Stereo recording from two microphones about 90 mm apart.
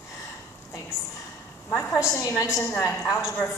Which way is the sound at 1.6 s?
30° left (ahead or behind).